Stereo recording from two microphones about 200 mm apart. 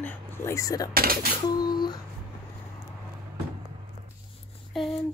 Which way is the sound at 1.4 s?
20° left (ahead or behind).